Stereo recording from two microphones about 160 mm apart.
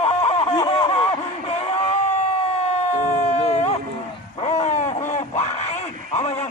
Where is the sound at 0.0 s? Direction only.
40° left (ahead or behind).